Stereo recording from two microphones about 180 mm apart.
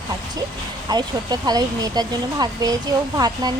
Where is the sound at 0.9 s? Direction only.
20° right (ahead or behind).